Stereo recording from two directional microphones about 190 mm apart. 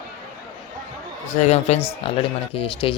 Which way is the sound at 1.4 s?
35° left (ahead or behind).